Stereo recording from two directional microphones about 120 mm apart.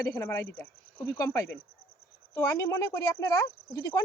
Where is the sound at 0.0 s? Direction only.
25° left (ahead or behind).